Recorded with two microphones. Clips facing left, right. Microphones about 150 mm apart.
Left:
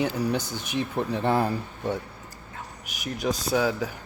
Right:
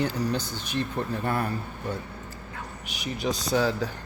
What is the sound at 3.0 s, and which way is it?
Speech, centre (ahead or behind).